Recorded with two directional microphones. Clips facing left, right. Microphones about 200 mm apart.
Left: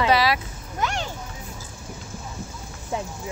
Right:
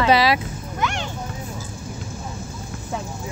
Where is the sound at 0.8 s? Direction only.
35° left (ahead or behind).